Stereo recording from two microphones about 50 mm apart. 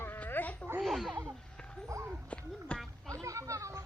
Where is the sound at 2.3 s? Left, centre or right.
Left.